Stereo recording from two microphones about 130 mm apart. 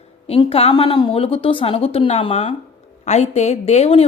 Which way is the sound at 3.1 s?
60° left (ahead or behind).